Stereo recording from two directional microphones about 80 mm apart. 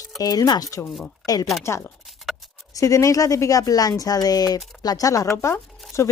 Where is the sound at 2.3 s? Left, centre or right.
Centre.